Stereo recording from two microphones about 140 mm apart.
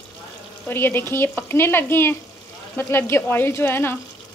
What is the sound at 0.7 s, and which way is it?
Speech, 15° left (ahead or behind).